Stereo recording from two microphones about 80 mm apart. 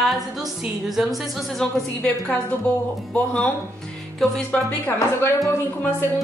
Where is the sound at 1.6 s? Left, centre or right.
Centre.